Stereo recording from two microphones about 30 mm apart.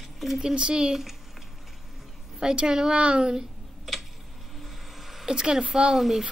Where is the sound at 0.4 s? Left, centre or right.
Right.